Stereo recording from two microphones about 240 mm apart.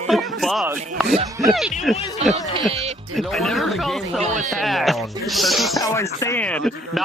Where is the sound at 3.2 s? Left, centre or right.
Centre.